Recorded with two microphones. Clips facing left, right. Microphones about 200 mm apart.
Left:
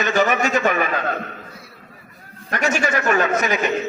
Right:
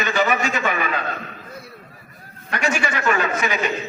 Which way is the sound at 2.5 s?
45° left (ahead or behind).